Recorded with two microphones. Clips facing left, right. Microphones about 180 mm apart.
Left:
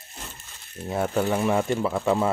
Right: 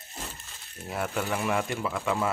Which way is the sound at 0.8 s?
30° left (ahead or behind).